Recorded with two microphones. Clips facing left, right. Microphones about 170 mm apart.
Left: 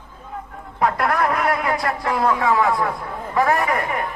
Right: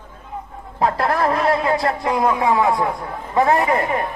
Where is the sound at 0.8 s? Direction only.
30° right (ahead or behind).